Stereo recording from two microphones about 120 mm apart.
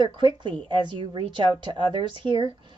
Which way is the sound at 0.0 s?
40° right (ahead or behind).